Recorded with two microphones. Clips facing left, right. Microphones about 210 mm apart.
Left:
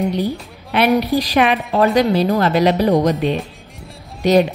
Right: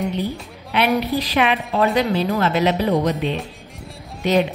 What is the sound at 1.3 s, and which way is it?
A woman's voice, 45° left (ahead or behind).